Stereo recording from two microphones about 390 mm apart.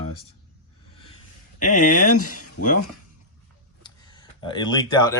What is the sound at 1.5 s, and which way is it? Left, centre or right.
Speech, centre.